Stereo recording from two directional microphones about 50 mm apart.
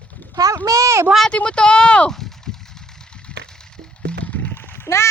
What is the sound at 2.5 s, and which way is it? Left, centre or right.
Vehicle, centre.